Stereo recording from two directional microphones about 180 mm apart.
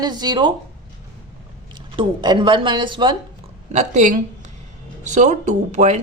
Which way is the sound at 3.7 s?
40° right (ahead or behind).